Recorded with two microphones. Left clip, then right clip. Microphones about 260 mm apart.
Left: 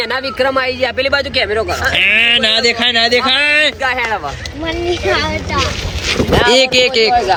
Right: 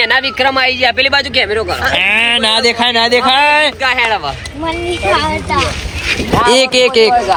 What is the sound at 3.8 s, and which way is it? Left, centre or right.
Speech, left.